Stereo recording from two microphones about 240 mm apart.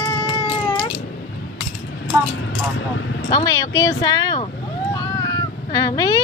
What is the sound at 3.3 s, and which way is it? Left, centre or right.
Speech, centre.